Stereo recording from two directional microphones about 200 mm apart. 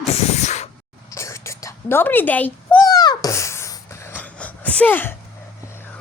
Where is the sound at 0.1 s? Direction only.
35° left (ahead or behind).